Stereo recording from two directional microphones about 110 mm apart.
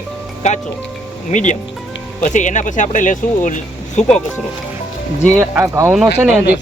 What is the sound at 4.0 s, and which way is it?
Speech, 90° left.